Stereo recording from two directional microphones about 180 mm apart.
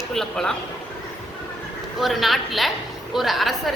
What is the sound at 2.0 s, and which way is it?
A woman's voice, centre (ahead or behind).